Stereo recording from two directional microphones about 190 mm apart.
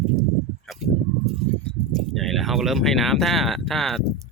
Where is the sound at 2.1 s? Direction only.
Centre (ahead or behind).